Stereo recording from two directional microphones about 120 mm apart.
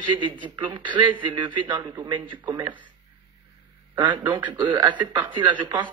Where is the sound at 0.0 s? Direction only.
45° right (ahead or behind).